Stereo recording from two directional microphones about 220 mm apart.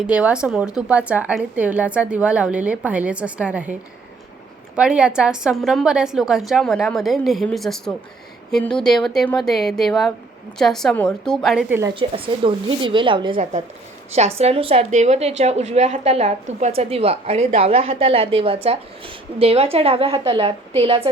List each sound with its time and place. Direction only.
0.1 s speech: 5° right (ahead or behind)
4.7 s speech: 5° right (ahead or behind)
11.9 s a woman's voice: 25° right (ahead or behind)